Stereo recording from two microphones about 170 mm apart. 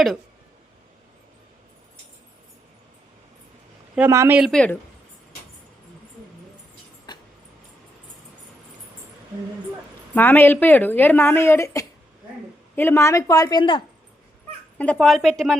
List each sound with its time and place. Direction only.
3.9 s speech: 15° right (ahead or behind)
4.4 s a woman's voice: centre (ahead or behind)
7.1 s a sound: 25° left (ahead or behind)
10.2 s a woman's voice: 10° left (ahead or behind); by 13.8 s 30° left (ahead or behind)
14.8 s a woman's voice: 5° left (ahead or behind)